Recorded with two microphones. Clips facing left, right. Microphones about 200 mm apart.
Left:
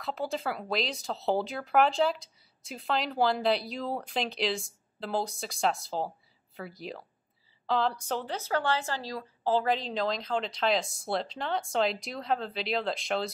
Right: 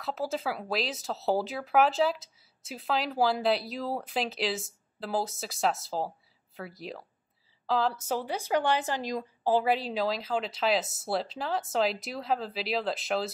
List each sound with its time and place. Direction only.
0.0 s speech: centre (ahead or behind)